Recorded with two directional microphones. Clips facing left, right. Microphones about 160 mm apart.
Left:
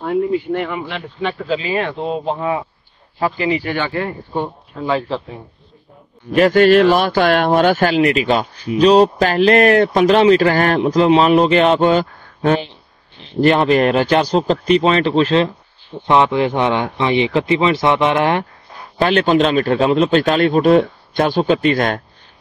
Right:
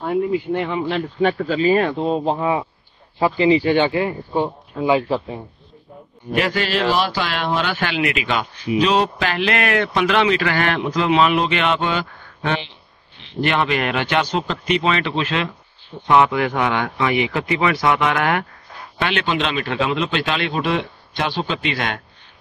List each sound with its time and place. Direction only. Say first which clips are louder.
0.5 s speech: left 1 dB; 20° right (ahead or behind)
0.8 s speech: right 4 dB; 45° right (ahead or behind)
3.2 s speech: right 3 dB; 20° right (ahead or behind)
6.3 s speech: left 10 dB; 45° left (ahead or behind); by 18.4 s 25° left (ahead or behind)
18.9 s speech: left 8 dB; 40° left (ahead or behind)